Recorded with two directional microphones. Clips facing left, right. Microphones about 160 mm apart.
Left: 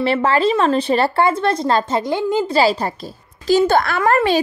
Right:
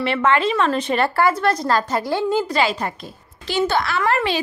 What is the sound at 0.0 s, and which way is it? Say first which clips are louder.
Speech: left 3 dB; 35° left (ahead or behind).